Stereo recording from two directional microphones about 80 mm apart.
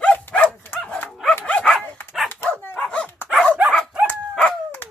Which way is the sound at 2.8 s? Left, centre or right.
Centre.